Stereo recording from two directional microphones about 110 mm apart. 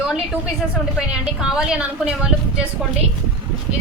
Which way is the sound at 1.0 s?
5° right (ahead or behind).